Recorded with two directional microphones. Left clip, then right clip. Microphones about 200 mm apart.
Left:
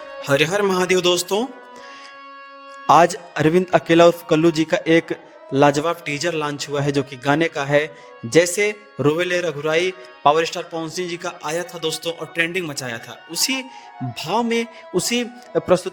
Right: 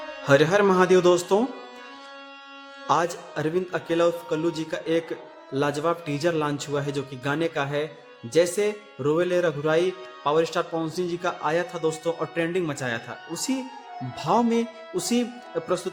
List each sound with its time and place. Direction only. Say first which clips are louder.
0.3 s a man's voice: left 1 dB; centre (ahead or behind)
2.8 s a man's voice: left 10 dB; 40° left (ahead or behind)
11.2 s a man's voice: even; 5° left (ahead or behind)
13.3 s a man's voice: left 8 dB; 45° left (ahead or behind)